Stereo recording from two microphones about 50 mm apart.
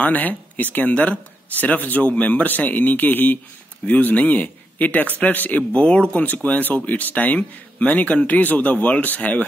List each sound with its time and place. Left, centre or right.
0.0 s a man's voice: left